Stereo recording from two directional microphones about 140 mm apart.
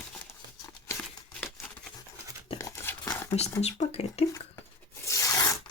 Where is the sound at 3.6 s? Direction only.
50° left (ahead or behind).